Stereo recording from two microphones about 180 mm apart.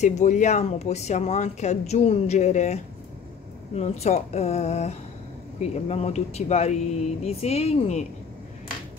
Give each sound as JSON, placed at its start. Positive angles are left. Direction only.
{"t": 0.0, "sound": "speech", "side_deg": 40}